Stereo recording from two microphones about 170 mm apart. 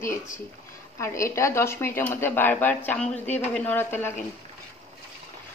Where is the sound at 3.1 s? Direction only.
40° left (ahead or behind).